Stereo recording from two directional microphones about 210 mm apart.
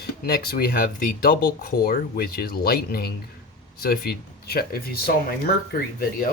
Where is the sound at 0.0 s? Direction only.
50° left (ahead or behind).